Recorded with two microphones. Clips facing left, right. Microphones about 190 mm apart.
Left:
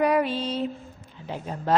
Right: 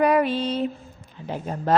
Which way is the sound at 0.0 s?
55° right (ahead or behind).